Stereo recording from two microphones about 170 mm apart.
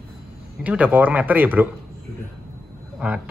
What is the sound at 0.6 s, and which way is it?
Speech, 10° right (ahead or behind).